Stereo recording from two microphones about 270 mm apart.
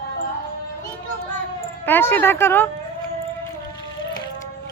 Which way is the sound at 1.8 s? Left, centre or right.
Centre.